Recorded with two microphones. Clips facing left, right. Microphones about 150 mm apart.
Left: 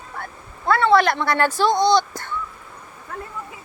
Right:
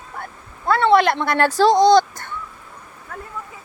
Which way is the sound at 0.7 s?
20° right (ahead or behind).